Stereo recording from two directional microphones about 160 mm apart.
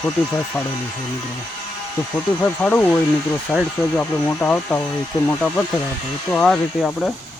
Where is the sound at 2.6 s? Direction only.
5° left (ahead or behind).